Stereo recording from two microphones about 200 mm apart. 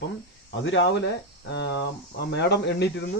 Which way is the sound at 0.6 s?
65° left (ahead or behind).